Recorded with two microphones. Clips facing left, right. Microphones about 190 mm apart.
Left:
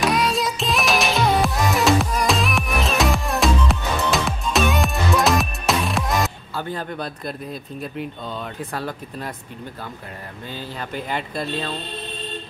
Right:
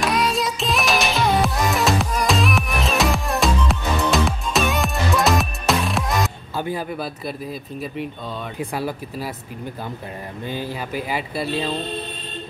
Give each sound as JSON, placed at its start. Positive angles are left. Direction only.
{"t": 0.0, "sound": "music", "side_deg": 0}
{"t": 6.5, "sound": "speech", "side_deg": -10}
{"t": 10.5, "sound": "speech", "side_deg": -10}